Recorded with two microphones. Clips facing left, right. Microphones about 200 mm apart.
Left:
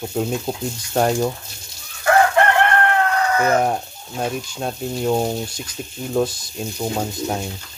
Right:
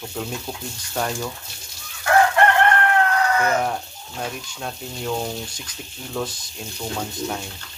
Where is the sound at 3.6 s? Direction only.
35° left (ahead or behind).